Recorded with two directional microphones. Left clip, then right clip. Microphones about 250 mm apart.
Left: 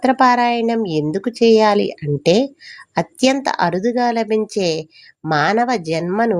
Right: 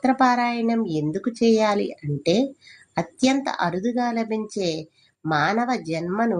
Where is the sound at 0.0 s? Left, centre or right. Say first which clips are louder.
Left 6 dB; left.